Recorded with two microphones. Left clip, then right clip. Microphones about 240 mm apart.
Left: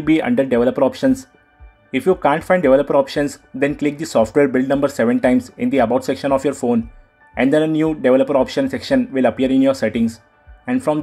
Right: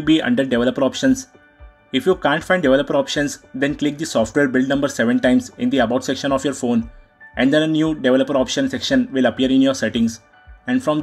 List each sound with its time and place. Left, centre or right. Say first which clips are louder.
0.0 s speech: left 1 dB; centre